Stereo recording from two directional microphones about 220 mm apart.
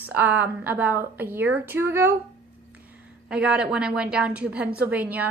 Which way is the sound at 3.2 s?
5° right (ahead or behind).